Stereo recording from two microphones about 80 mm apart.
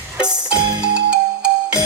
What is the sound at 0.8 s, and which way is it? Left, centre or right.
Music, centre.